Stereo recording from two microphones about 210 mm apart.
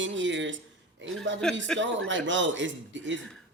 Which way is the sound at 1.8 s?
60° right (ahead or behind).